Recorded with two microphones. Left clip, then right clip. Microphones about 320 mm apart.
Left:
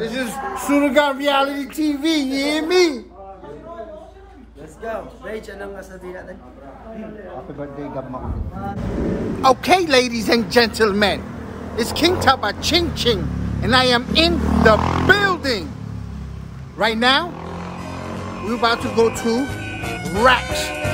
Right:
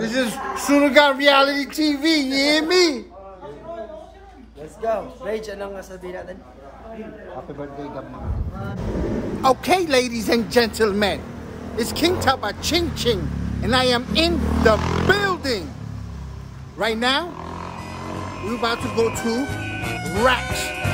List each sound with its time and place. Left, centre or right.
0.3 s speech: centre
4.8 s speech: right
9.4 s speech: centre
16.7 s speech: centre